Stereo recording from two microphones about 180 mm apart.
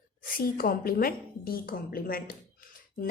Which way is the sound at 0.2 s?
50° left (ahead or behind).